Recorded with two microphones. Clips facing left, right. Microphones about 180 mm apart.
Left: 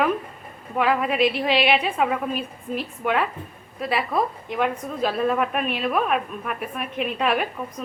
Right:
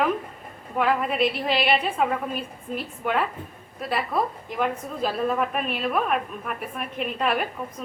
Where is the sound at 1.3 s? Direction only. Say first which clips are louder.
Left 3 dB; 70° left (ahead or behind).